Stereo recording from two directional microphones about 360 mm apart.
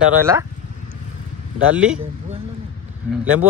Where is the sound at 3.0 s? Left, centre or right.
Centre.